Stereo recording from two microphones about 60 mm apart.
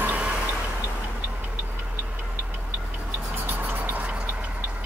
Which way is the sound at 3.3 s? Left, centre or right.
Right.